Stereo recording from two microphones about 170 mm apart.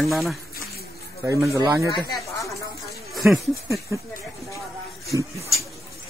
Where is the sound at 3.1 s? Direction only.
Centre (ahead or behind).